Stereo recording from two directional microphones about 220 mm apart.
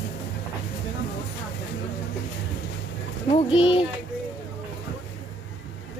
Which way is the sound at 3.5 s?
60° left (ahead or behind).